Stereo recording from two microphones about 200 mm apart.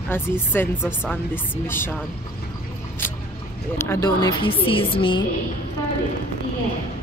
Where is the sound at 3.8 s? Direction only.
15° left (ahead or behind).